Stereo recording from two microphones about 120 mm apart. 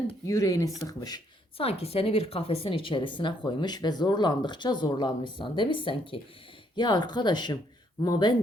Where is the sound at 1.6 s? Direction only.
55° left (ahead or behind); by 8.4 s 35° left (ahead or behind).